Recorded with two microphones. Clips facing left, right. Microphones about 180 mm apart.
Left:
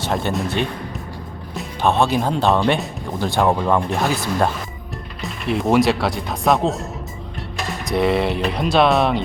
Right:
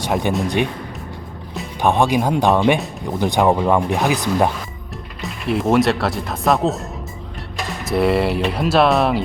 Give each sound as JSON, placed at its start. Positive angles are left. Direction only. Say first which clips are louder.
{"t": 0.0, "sound": "speech", "louder": "right 2 dB", "side_deg": -15}
{"t": 1.8, "sound": "speech", "louder": "right 1 dB", "side_deg": -15}
{"t": 5.2, "sound": "speech", "louder": "right 1 dB", "side_deg": 0}
{"t": 7.9, "sound": "speech", "louder": "right 1 dB", "side_deg": -5}